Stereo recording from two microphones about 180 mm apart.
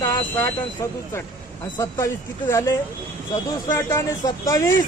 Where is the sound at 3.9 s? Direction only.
15° left (ahead or behind).